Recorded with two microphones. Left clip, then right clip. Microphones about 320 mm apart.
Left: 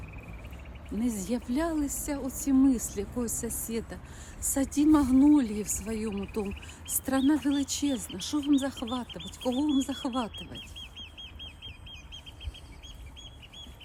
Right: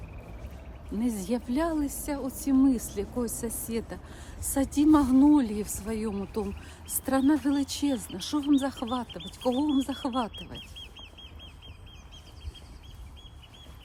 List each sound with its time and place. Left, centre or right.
0.9 s a woman's voice: centre
9.0 s speech: left
9.6 s a woman's voice: centre
10.6 s bird: left